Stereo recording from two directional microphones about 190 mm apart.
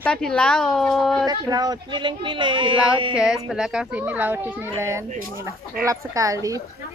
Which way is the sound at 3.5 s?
5° right (ahead or behind).